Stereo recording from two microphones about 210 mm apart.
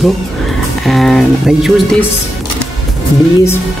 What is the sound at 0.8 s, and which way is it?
Speech, centre (ahead or behind).